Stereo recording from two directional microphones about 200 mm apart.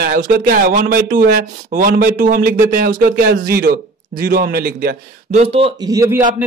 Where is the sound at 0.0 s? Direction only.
45° right (ahead or behind); by 6.2 s 15° right (ahead or behind).